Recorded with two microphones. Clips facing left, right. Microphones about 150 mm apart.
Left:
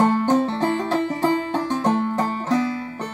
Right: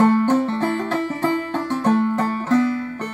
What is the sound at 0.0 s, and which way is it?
Music, 15° left (ahead or behind).